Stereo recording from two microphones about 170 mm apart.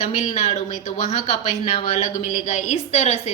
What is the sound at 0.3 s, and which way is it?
Speech, 35° left (ahead or behind).